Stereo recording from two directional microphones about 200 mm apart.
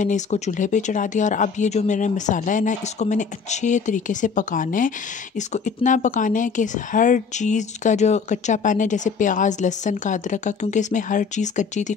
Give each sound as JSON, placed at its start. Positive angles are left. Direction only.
{"t": 0.0, "sound": "a woman's voice", "side_deg": 35}